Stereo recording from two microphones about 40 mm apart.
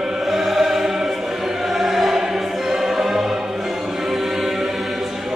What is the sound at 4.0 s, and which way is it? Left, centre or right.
Music, centre.